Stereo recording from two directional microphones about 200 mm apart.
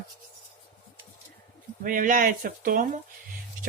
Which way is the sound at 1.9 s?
40° right (ahead or behind).